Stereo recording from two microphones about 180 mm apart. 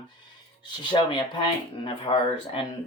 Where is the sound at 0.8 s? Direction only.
25° left (ahead or behind).